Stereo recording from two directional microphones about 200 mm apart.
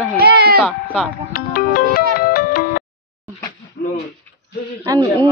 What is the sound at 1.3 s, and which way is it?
Music, 45° left (ahead or behind).